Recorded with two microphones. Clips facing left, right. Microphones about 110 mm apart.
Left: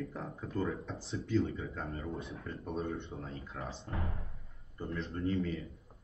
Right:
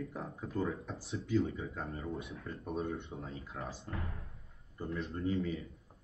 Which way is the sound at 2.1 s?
30° left (ahead or behind).